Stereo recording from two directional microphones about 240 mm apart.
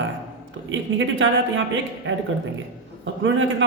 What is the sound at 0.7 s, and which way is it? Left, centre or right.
A woman's voice, right.